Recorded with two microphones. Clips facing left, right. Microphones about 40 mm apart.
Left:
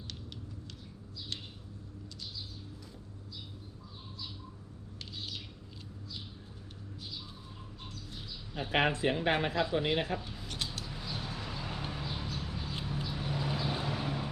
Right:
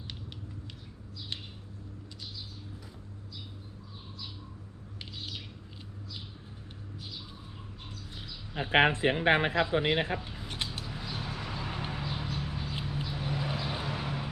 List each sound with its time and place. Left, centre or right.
4.9 s bird: centre
8.1 s speech: right
9.6 s a sound: right
12.6 s vehicle: centre